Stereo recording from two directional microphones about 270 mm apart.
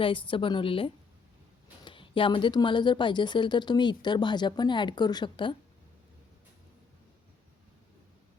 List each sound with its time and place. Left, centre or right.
0.0 s a woman's voice: centre